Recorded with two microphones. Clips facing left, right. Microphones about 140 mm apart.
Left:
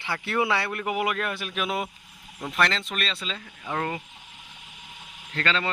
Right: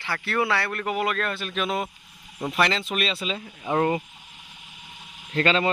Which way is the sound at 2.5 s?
5° right (ahead or behind).